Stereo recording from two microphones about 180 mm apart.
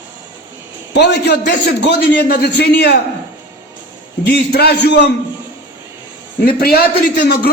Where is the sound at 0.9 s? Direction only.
65° left (ahead or behind).